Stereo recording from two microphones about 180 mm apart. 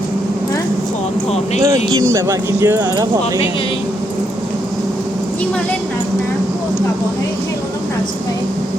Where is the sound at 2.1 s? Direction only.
15° right (ahead or behind).